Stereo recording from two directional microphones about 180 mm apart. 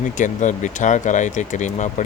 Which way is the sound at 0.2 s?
45° left (ahead or behind).